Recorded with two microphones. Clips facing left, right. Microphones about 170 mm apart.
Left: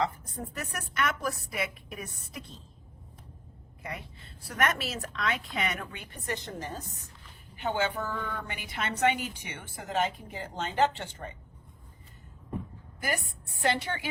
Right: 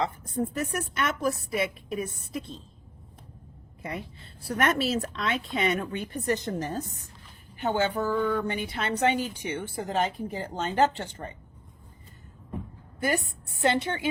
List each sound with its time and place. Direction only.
0.0 s speech: 25° right (ahead or behind)
4.4 s a woman's voice: 30° right (ahead or behind)
13.0 s speech: 25° right (ahead or behind)